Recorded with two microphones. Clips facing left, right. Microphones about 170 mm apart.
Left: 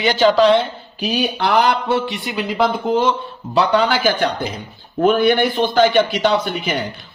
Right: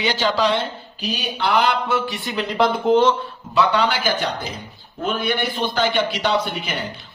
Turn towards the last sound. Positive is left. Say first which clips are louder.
# left 4 dB
turn(degrees=50)  # may be behind; listen again after turning